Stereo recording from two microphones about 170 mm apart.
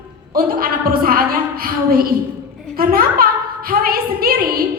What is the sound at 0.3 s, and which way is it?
A woman's voice, 60° right (ahead or behind).